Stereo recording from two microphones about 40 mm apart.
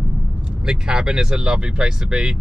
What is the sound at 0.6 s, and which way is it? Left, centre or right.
Speech, centre.